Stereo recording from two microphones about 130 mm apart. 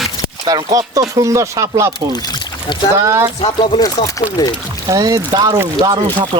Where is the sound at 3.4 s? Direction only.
35° left (ahead or behind).